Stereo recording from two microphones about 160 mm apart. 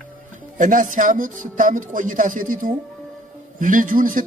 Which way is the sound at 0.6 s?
55° right (ahead or behind).